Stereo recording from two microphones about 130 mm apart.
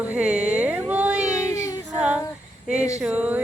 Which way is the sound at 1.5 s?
25° left (ahead or behind).